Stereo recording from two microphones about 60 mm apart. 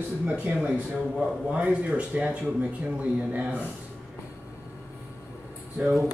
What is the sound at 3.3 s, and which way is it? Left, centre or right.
Speech, right.